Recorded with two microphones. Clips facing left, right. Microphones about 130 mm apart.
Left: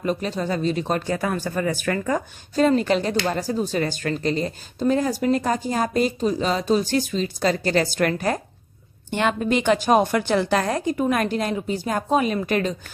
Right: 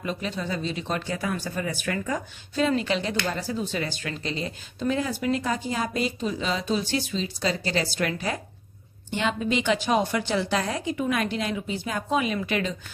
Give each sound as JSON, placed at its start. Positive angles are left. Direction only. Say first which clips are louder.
{"t": 0.0, "sound": "speech", "louder": "left 6 dB", "side_deg": 40}